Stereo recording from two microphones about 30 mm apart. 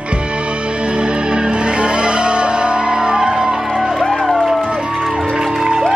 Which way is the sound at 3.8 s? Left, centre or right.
Centre.